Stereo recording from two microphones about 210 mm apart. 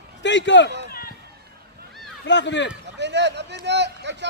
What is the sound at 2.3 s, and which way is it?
Speech, 60° left (ahead or behind).